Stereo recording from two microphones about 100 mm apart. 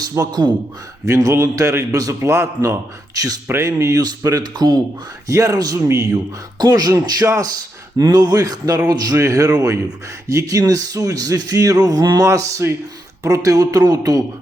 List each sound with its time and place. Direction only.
0.0 s speech: 40° right (ahead or behind)
1.0 s a man's voice: 30° right (ahead or behind)